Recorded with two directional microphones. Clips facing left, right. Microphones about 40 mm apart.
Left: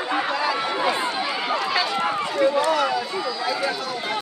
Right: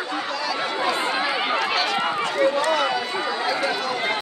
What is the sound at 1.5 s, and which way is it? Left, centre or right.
Run, right.